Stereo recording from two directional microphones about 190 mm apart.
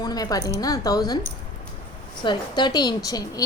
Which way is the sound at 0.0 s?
20° left (ahead or behind).